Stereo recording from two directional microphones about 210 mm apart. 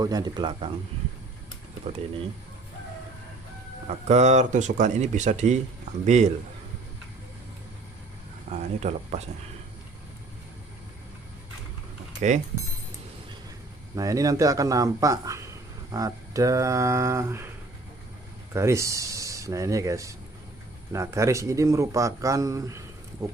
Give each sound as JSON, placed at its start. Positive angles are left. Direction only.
{"t": 0.0, "sound": "speech", "side_deg": -20}
{"t": 1.9, "sound": "speech", "side_deg": -25}
{"t": 3.8, "sound": "speech", "side_deg": -35}
{"t": 8.4, "sound": "speech", "side_deg": -30}
{"t": 13.9, "sound": "speech", "side_deg": -15}
{"t": 18.5, "sound": "speech", "side_deg": -15}